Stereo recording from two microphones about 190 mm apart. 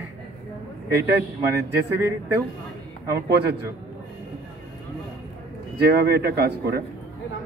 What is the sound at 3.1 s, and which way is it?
Speech, 60° right (ahead or behind).